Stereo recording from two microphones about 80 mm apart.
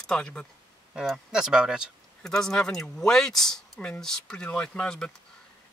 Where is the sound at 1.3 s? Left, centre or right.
Centre.